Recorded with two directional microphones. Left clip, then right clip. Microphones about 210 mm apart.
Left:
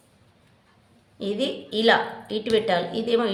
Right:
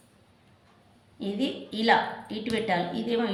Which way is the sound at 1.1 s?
55° left (ahead or behind).